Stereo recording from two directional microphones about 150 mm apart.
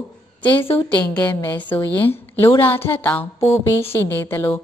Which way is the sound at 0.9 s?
10° left (ahead or behind).